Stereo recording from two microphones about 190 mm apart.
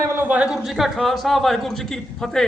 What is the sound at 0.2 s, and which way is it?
A man's voice, 5° right (ahead or behind).